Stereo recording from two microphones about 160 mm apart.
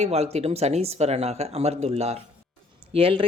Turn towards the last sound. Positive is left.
turn(degrees=-35)  # may be behind; listen again after turning